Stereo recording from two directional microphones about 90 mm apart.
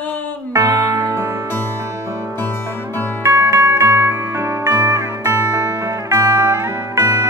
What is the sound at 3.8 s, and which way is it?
Music, 30° right (ahead or behind).